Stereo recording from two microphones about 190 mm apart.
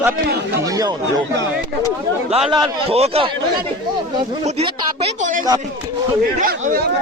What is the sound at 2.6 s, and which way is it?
Speech, 30° right (ahead or behind).